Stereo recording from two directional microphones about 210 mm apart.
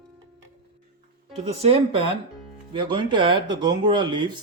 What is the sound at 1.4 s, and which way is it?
Speech, 30° right (ahead or behind).